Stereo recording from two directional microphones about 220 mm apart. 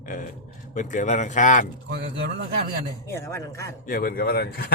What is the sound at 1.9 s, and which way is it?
Speech, 50° right (ahead or behind).